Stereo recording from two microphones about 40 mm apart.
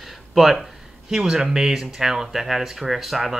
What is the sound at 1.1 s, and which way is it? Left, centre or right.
Speech, centre.